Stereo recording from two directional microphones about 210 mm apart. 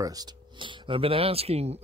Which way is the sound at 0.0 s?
20° right (ahead or behind).